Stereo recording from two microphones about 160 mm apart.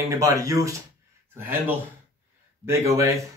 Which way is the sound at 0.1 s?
20° right (ahead or behind).